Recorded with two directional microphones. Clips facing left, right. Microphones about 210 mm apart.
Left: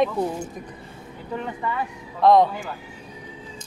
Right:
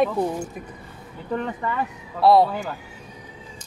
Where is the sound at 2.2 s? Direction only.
5° right (ahead or behind).